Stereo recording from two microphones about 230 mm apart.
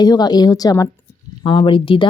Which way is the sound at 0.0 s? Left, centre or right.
Centre.